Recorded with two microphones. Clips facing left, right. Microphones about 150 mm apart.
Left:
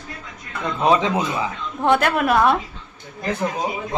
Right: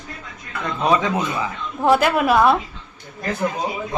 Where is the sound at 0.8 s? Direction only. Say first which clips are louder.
Left 1 dB; 25° left (ahead or behind).